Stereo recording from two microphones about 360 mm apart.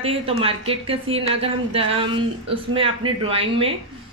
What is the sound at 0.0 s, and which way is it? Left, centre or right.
Speech, centre.